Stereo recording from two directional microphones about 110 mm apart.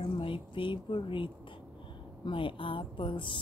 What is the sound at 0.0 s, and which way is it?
Speech, 50° left (ahead or behind).